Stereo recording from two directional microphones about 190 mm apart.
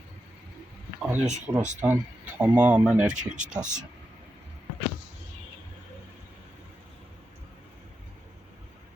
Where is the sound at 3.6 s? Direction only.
40° right (ahead or behind).